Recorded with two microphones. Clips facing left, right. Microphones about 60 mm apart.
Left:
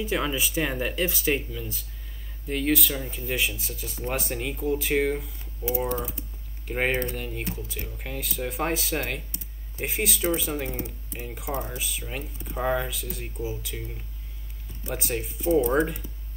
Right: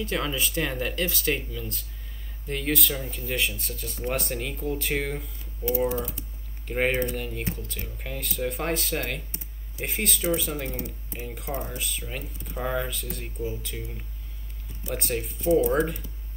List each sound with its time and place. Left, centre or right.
0.0 s speech: centre
7.2 s speech: centre
11.5 s speech: centre
11.8 s speech: centre
15.0 s speech: centre